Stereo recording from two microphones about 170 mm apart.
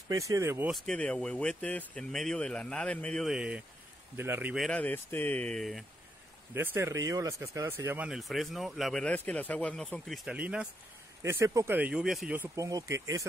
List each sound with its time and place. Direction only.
0.1 s speech: 20° right (ahead or behind)
0.7 s speech: centre (ahead or behind)
4.6 s speech: 10° left (ahead or behind)
6.5 s speech: 15° right (ahead or behind)
8.1 s speech: centre (ahead or behind)
12.4 s speech: 20° right (ahead or behind)